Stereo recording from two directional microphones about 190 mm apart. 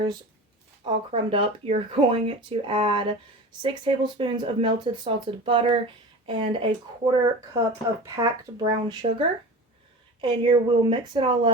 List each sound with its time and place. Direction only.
0.9 s speech: 25° right (ahead or behind)